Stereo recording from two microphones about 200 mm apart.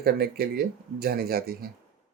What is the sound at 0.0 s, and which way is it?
Speech, 50° right (ahead or behind).